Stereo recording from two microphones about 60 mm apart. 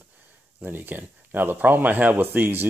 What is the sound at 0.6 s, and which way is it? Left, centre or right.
Speech, right.